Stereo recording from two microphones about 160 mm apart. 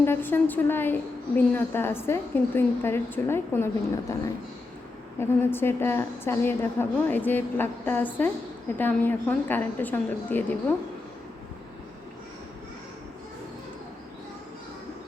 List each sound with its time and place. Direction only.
0.0 s a woman's voice: 15° left (ahead or behind)